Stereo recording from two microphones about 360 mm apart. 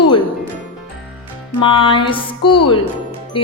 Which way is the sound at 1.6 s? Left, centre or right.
Centre.